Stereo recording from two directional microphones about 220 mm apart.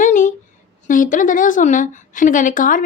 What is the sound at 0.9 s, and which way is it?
A woman's voice, 35° left (ahead or behind).